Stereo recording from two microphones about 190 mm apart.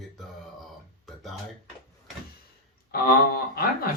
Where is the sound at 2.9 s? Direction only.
50° left (ahead or behind).